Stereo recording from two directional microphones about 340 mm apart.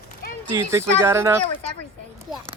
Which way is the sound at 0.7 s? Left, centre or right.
Centre.